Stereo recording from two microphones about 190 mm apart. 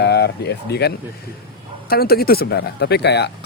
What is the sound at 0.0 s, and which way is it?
Speech, 60° left (ahead or behind).